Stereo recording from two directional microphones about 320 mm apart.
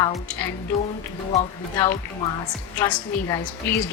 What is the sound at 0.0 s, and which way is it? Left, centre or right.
Speech, centre.